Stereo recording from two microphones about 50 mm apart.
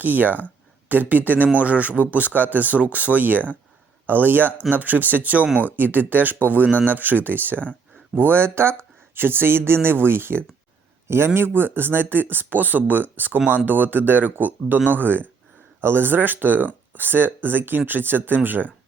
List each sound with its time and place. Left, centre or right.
0.0 s speech: right